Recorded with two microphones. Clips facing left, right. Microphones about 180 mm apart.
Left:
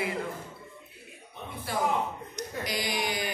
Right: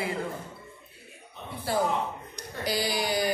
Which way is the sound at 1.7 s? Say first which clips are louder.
Right 5 dB; 30° right (ahead or behind).